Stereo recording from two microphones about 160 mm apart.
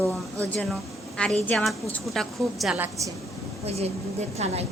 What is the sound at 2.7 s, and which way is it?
Speech, 10° right (ahead or behind).